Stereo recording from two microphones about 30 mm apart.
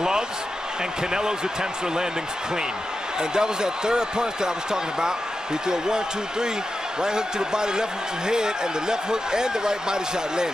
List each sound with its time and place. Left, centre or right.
1.1 s speech: right
3.2 s speech: right